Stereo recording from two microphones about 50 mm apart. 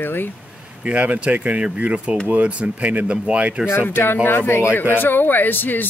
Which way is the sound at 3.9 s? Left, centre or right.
Left.